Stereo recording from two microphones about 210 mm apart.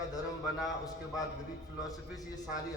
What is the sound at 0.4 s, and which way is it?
Speech, centre (ahead or behind).